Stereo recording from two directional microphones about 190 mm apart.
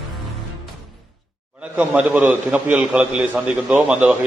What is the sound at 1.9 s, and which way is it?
A man's voice, 5° right (ahead or behind).